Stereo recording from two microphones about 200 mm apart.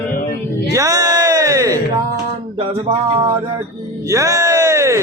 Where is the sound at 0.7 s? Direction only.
15° right (ahead or behind).